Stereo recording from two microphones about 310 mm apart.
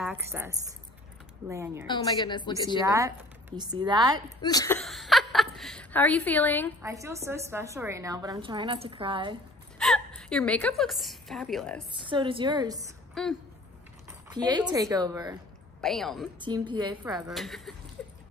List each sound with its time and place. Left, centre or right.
0.0 s a woman's voice: centre
1.9 s a woman's voice: centre
2.8 s a woman's voice: centre
4.4 s a woman's voice: centre
6.8 s a woman's voice: centre
9.8 s a woman's voice: centre
11.9 s a woman's voice: centre
13.1 s a woman's voice: centre
14.3 s a woman's voice: centre
15.8 s speech: centre
16.3 s a woman's voice: centre
17.3 s speech: centre